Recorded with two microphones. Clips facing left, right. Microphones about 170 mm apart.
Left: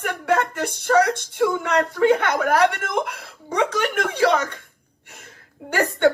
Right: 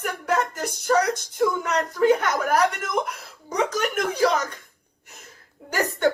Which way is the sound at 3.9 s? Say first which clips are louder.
Left 2 dB; 60° left (ahead or behind).